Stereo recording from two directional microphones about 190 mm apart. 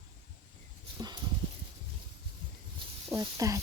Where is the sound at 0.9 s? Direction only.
20° right (ahead or behind).